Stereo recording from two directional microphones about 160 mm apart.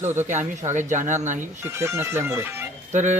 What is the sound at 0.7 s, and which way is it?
Speech, 50° right (ahead or behind).